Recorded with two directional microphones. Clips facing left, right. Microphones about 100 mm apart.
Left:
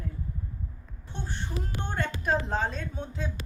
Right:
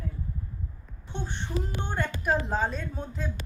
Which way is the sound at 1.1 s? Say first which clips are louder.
Right 3 dB; 20° right (ahead or behind).